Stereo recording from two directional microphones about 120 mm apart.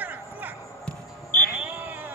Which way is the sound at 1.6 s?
15° right (ahead or behind).